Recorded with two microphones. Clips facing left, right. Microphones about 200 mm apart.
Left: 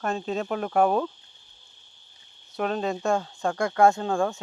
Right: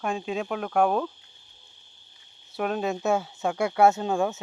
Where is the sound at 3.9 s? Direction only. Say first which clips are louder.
Even; 20° right (ahead or behind).